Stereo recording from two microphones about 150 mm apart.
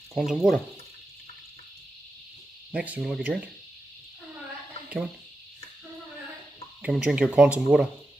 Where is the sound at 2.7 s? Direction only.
5° right (ahead or behind).